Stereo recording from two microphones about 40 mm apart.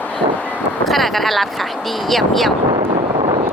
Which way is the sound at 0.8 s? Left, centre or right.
Centre.